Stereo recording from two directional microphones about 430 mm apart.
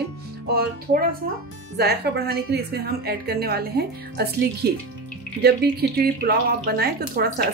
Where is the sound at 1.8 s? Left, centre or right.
Right.